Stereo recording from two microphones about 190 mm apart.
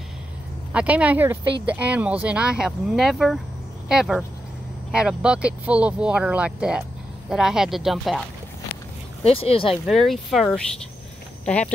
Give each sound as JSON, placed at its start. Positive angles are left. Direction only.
{"t": 0.7, "sound": "speech", "side_deg": -5}
{"t": 9.2, "sound": "speech", "side_deg": 30}
{"t": 9.8, "sound": "speech", "side_deg": 0}